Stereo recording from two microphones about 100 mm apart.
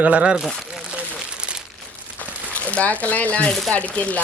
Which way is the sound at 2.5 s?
15° left (ahead or behind).